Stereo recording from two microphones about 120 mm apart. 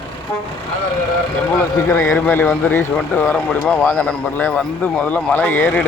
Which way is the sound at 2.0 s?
15° left (ahead or behind).